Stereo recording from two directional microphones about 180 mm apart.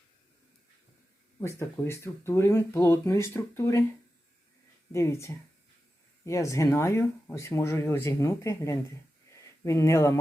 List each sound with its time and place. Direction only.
1.4 s speech: 15° left (ahead or behind)
4.9 s speech: 15° left (ahead or behind)